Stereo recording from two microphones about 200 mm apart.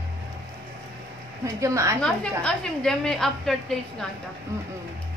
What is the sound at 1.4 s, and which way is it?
Speech, 15° right (ahead or behind).